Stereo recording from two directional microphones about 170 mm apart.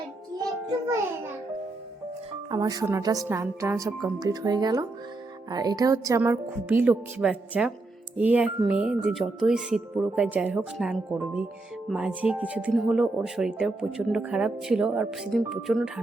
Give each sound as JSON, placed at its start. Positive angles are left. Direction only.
{"t": 2.5, "sound": "a woman's voice", "side_deg": -20}